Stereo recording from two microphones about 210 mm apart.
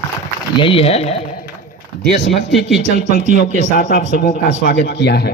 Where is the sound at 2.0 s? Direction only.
55° left (ahead or behind).